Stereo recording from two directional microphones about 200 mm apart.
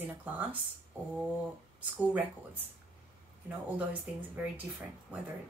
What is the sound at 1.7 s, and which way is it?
Speech, 5° right (ahead or behind).